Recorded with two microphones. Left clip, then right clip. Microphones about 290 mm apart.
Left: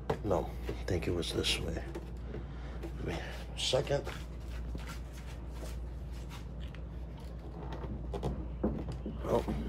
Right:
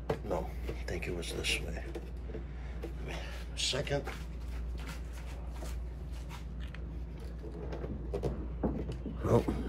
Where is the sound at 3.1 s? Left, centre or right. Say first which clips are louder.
Left 3 dB; left.